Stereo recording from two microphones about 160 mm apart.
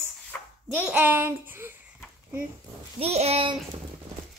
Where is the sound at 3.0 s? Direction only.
40° right (ahead or behind).